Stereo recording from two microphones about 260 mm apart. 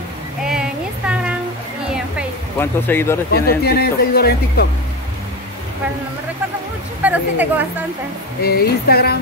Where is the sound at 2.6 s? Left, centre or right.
Centre.